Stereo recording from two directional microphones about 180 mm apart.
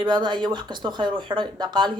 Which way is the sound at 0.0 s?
25° right (ahead or behind).